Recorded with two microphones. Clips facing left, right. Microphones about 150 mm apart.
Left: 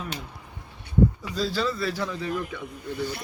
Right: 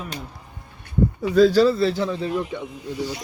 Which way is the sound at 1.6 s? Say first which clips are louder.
Right 10 dB; 30° right (ahead or behind).